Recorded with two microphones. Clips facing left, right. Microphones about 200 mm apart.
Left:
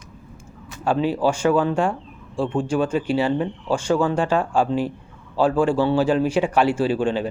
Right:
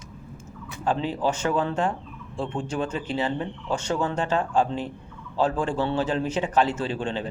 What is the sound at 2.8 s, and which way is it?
Speech, 10° left (ahead or behind).